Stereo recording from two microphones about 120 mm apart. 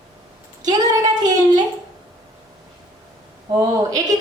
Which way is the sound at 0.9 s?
35° right (ahead or behind).